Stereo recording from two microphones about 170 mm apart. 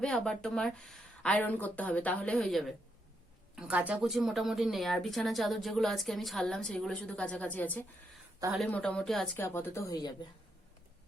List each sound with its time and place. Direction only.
0.0 s speech: 5° left (ahead or behind)
3.5 s speech: 10° right (ahead or behind); by 10.1 s 20° left (ahead or behind)